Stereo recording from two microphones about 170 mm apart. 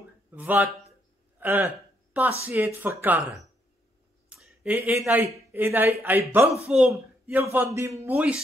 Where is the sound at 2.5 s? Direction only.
10° right (ahead or behind).